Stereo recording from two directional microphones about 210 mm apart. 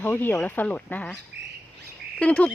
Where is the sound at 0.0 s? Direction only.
10° left (ahead or behind).